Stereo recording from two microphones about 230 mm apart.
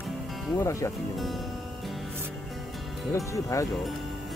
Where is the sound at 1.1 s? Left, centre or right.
Centre.